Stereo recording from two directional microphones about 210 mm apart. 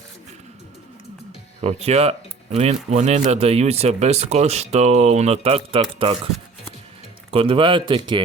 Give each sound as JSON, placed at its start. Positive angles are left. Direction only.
{"t": 1.6, "sound": "a man's voice", "side_deg": -30}
{"t": 7.3, "sound": "a man's voice", "side_deg": -25}